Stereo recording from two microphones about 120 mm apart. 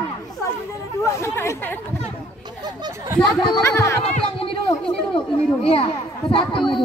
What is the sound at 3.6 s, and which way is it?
Speech, 25° left (ahead or behind).